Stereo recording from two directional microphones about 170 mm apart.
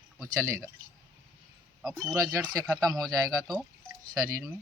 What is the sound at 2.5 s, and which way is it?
Speech, 20° right (ahead or behind).